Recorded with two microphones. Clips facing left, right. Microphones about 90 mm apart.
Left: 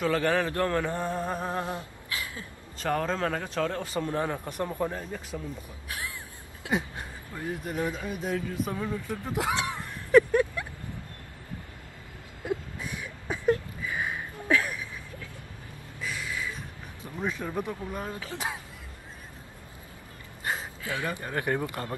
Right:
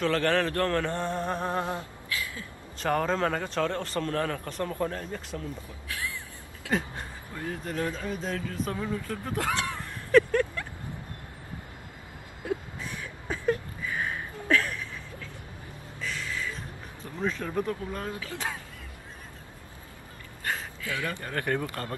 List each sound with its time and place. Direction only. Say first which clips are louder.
0.0 s mantra: even; 10° left (ahead or behind)
1.6 s a sound: right 2 dB; 25° right (ahead or behind)
2.0 s a sound: right 1 dB; 25° left (ahead or behind)
2.8 s a man's voice: right 2 dB; centre (ahead or behind)
5.9 s speech: right 2 dB; 20° left (ahead or behind)
12.4 s vehicle: even; 15° left (ahead or behind)
13.8 s a sound: even; 10° left (ahead or behind)
16.0 s music: even; 10° left (ahead or behind)
17.2 s mantra: right 2 dB; 10° left (ahead or behind)
18.2 s speech: even; 20° left (ahead or behind)
20.4 s speech: even; 20° left (ahead or behind)